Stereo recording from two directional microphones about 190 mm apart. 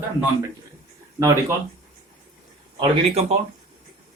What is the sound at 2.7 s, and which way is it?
Speech, 30° right (ahead or behind).